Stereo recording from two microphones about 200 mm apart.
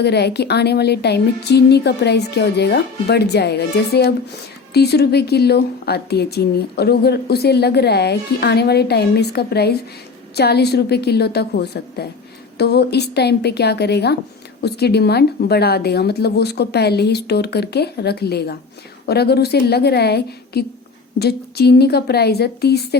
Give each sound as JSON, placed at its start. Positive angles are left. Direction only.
{"t": 0.0, "sound": "a woman's voice", "side_deg": 55}